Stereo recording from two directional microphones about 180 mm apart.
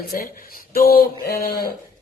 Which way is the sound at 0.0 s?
55° left (ahead or behind).